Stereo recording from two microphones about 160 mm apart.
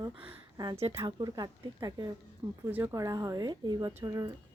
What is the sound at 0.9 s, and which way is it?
A woman's voice, 25° right (ahead or behind).